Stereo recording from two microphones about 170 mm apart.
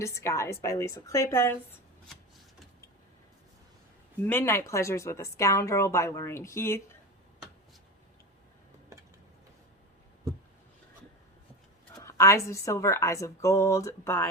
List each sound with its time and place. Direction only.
0.0 s a woman's voice: 15° left (ahead or behind)
4.2 s a woman's voice: 10° left (ahead or behind)
11.9 s a woman's voice: 15° left (ahead or behind)